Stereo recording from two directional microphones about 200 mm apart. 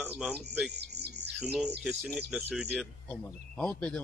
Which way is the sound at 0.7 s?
55° right (ahead or behind).